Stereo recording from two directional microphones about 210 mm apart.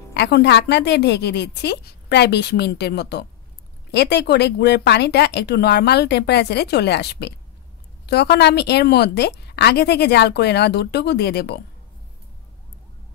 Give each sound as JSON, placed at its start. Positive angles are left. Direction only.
{"t": 0.1, "sound": "a woman's voice", "side_deg": 50}